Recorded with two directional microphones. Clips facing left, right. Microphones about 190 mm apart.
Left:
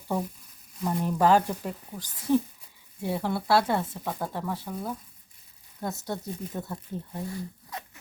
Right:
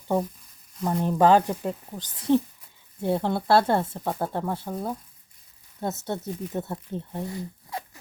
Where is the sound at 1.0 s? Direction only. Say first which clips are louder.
Right 3 dB; 20° right (ahead or behind).